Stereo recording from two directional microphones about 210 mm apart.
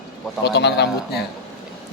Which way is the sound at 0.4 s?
55° left (ahead or behind).